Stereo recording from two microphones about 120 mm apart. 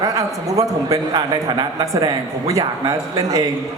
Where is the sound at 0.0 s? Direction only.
30° right (ahead or behind).